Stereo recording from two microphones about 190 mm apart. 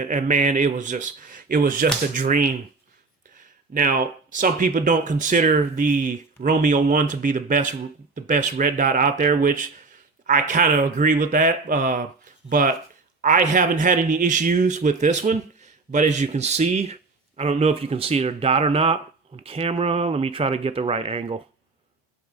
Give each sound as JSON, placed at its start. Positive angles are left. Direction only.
{"t": 0.0, "sound": "speech", "side_deg": -45}
{"t": 3.8, "sound": "speech", "side_deg": -45}